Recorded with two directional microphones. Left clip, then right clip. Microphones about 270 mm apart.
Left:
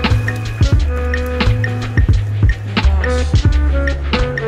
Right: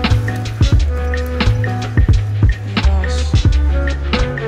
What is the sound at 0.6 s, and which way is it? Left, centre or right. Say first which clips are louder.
Music: left 1 dB; centre.